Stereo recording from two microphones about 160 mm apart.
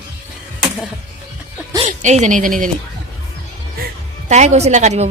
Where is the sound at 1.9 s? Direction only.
50° right (ahead or behind).